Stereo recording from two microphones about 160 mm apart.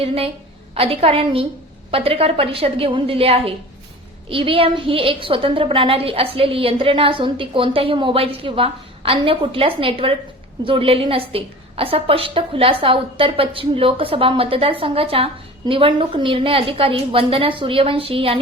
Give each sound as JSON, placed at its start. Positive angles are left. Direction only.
{"t": 0.0, "sound": "a woman's voice", "side_deg": -35}